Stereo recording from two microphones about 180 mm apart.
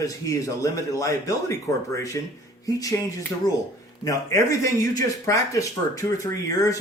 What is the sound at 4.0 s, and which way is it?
Speech, 20° left (ahead or behind).